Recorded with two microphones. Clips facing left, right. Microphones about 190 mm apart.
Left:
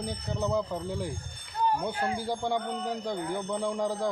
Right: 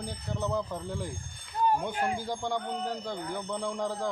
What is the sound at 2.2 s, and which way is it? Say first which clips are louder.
Speech: left 3 dB; 10° left (ahead or behind).